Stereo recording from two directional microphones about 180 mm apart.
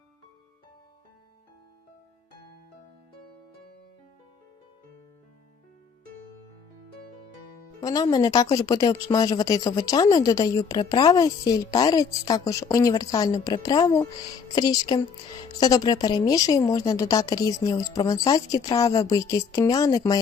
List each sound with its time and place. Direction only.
7.8 s speech: 20° left (ahead or behind)